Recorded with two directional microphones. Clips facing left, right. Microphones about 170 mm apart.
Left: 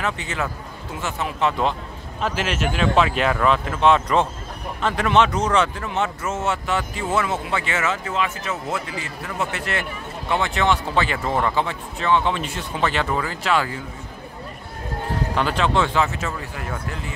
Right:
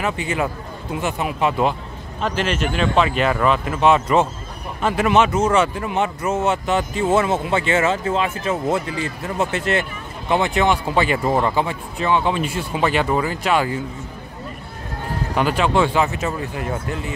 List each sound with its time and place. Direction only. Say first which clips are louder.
0.0 s speech: right 4 dB; 10° right (ahead or behind)
2.2 s speech: right 2 dB; 5° left (ahead or behind); by 13.7 s 15° right (ahead or behind)
15.3 s speech: right 3 dB; 10° right (ahead or behind)